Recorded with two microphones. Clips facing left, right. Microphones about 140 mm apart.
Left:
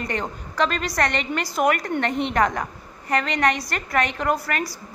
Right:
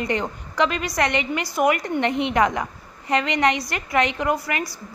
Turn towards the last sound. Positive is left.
turn(degrees=-15)  # may be behind; listen again after turning